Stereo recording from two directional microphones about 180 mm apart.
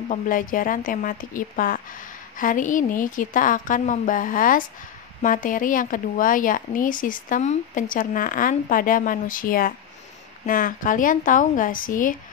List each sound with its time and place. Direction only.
0.1 s speech: 50° left (ahead or behind)